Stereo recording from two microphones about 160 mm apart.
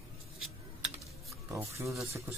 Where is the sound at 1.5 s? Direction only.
15° right (ahead or behind).